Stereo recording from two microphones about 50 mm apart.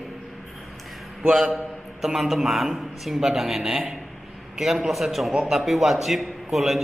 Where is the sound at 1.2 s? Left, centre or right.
Centre.